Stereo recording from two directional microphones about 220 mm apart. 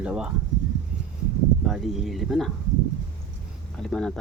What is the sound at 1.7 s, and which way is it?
Speech, centre (ahead or behind).